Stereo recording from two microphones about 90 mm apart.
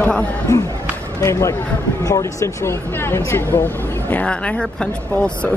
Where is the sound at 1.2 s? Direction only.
35° left (ahead or behind).